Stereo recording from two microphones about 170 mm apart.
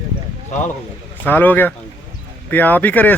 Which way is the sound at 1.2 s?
10° left (ahead or behind).